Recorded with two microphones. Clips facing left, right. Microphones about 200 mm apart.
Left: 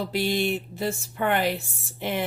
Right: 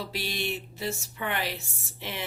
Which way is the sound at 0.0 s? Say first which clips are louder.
Left 8 dB; 55° left (ahead or behind).